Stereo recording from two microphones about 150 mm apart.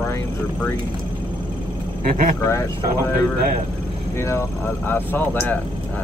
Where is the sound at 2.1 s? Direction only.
65° right (ahead or behind).